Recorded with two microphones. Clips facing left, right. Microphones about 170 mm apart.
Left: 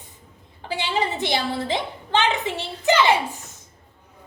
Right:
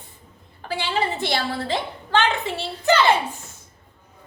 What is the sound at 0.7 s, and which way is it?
A woman's voice, 20° left (ahead or behind).